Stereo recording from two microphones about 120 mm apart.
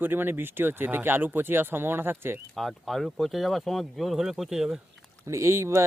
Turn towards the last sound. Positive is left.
turn(degrees=-25)  # may be behind; listen again after turning